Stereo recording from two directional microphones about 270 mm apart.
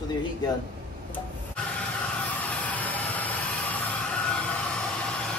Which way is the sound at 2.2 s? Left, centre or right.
Centre.